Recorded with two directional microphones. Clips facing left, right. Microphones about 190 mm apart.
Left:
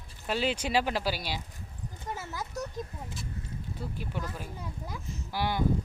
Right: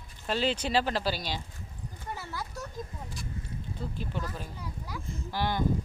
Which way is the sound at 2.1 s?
20° left (ahead or behind).